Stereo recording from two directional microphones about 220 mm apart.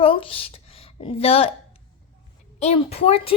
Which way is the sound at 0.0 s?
25° left (ahead or behind).